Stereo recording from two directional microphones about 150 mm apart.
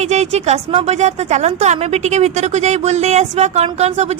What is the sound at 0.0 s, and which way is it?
A woman's voice, 50° right (ahead or behind).